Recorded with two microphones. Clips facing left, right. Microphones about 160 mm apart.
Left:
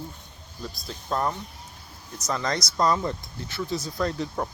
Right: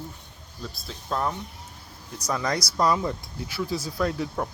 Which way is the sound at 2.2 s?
10° right (ahead or behind).